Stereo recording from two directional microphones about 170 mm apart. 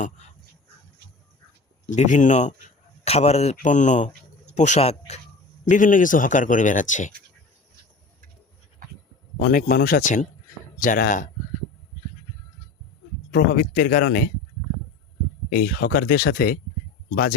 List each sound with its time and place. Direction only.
1.9 s speech: 45° left (ahead or behind)
5.6 s speech: 50° left (ahead or behind)
9.4 s speech: 55° left (ahead or behind)
13.3 s speech: 50° left (ahead or behind)
15.5 s speech: 55° left (ahead or behind)